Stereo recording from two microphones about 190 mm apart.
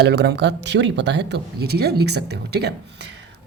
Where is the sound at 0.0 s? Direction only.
60° right (ahead or behind).